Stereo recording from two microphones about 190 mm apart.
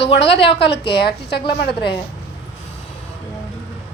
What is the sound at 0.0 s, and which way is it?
A woman's voice, 65° left (ahead or behind).